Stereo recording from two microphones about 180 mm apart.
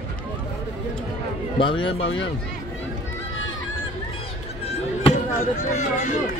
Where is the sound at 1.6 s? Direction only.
30° left (ahead or behind).